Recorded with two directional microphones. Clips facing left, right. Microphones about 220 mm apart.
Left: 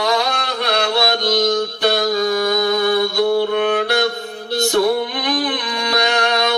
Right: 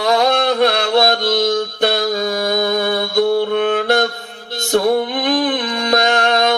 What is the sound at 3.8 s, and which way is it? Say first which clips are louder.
Mantra: right 2 dB; 50° right (ahead or behind).